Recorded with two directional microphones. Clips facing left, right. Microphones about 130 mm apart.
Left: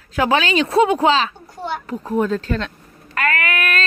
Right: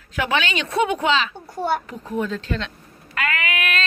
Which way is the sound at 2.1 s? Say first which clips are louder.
Left 5 dB; 45° left (ahead or behind).